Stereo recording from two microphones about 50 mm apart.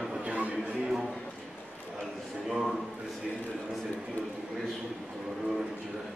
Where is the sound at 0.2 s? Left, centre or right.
Right.